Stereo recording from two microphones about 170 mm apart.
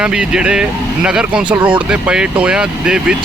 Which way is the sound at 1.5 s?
30° right (ahead or behind).